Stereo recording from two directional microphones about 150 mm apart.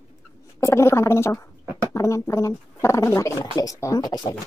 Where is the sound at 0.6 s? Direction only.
20° left (ahead or behind).